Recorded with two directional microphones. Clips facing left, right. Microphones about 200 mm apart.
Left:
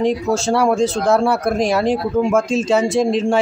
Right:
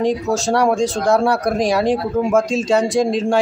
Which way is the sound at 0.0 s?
Centre (ahead or behind).